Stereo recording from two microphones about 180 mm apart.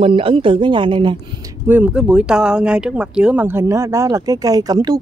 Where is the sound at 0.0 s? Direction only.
30° right (ahead or behind).